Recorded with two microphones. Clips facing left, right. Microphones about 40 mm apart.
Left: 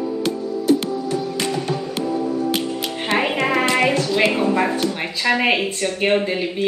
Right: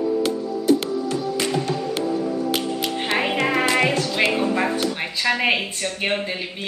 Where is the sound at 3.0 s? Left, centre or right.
Centre.